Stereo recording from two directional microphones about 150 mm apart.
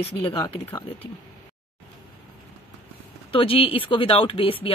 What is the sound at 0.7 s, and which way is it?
Speech, 30° left (ahead or behind).